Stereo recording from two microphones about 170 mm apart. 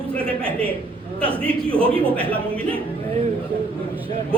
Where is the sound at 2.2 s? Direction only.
30° right (ahead or behind).